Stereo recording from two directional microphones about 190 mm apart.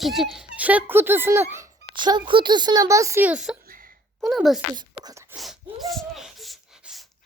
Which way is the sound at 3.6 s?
50° right (ahead or behind).